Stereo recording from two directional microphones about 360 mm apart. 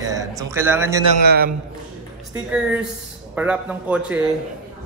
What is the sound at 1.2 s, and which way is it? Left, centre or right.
Speech, right.